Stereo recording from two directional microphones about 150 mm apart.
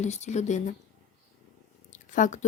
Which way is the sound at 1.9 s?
55° left (ahead or behind).